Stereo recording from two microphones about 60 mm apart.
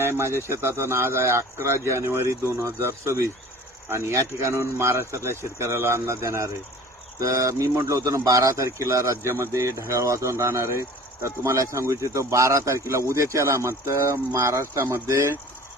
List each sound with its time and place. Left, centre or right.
0.0 s speech: right
7.2 s speech: right
14.8 s speech: right